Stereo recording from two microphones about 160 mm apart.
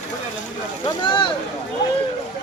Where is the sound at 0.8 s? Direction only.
30° left (ahead or behind).